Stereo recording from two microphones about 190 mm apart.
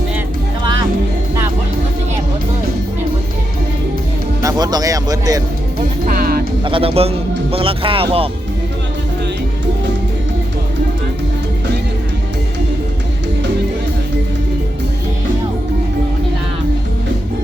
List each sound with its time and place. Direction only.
0.6 s music: 20° right (ahead or behind)
4.4 s a man's voice: 20° right (ahead or behind)
6.1 s music: 50° right (ahead or behind)
6.7 s a man's voice: 30° right (ahead or behind)